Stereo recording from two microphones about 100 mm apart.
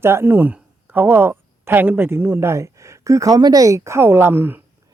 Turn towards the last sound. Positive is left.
turn(degrees=-20)  # may be behind; listen again after turning